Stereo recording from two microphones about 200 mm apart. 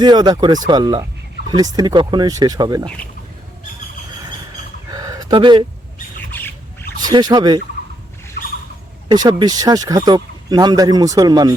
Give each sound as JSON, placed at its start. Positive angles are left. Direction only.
{"t": 0.0, "sound": "speech", "side_deg": -20}
{"t": 2.8, "sound": "speech", "side_deg": 5}
{"t": 4.9, "sound": "a sound", "side_deg": -20}
{"t": 6.3, "sound": "squawk", "side_deg": 10}
{"t": 7.0, "sound": "speech", "side_deg": -20}
{"t": 9.0, "sound": "speech", "side_deg": -20}